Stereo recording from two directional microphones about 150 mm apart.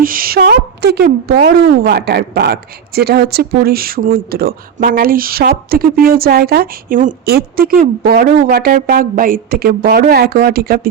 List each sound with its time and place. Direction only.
0.0 s a woman's voice: 70° right (ahead or behind); by 10.8 s 90° right